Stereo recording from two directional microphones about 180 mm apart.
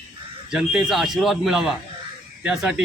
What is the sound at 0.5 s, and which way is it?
Speech, centre (ahead or behind).